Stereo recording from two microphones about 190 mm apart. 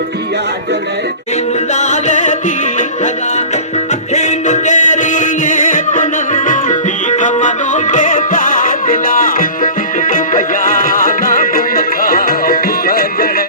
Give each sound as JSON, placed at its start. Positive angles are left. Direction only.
{"t": 1.7, "sound": "music", "side_deg": 40}